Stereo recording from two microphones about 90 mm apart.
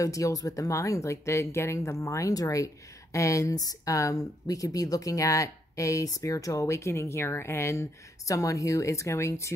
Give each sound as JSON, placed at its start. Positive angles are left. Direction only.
{"t": 0.0, "sound": "speech", "side_deg": 40}